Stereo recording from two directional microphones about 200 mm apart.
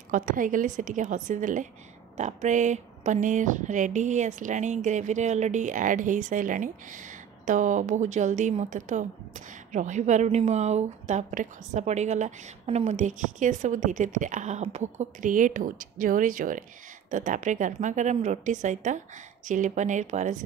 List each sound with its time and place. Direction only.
0.1 s speech: 40° right (ahead or behind)